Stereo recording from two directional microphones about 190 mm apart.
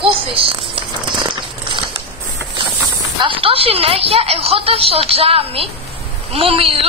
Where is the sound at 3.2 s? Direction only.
30° right (ahead or behind).